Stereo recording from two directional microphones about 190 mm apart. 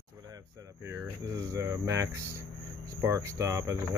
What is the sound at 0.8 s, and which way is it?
Speech, 15° right (ahead or behind).